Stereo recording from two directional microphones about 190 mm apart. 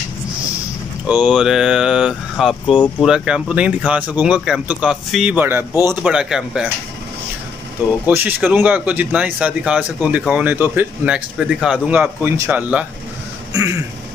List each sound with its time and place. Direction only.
1.0 s a man's voice: 5° right (ahead or behind)
8.1 s speech: 10° right (ahead or behind)
13.5 s a sound: 15° right (ahead or behind)